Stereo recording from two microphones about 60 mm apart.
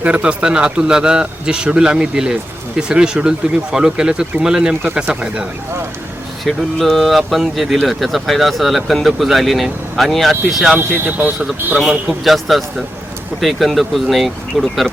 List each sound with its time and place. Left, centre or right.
0.0 s a man's voice: centre
6.4 s speech: centre
10.8 s speech: right
11.9 s speech: centre